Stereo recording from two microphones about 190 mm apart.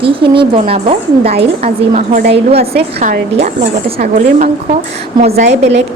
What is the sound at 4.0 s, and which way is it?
A woman's voice, 45° right (ahead or behind).